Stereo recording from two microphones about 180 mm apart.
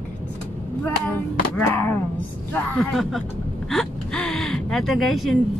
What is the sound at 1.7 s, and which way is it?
Speech, 10° left (ahead or behind).